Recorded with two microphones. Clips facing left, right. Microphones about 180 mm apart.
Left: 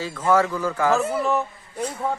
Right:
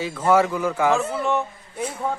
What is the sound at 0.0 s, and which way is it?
Speech, 15° right (ahead or behind).